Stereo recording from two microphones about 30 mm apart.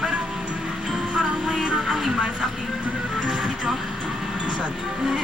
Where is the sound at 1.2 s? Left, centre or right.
Centre.